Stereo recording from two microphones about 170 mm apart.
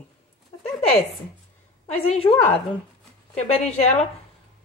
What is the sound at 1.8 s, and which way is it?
Speech, 35° left (ahead or behind).